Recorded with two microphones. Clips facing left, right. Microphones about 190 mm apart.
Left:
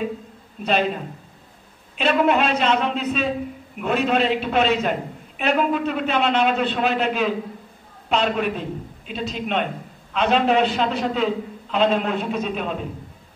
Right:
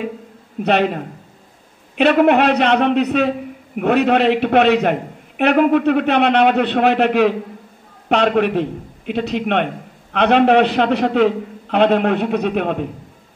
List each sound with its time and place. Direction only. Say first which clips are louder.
0.6 s a man's voice: right 5 dB; 65° right (ahead or behind)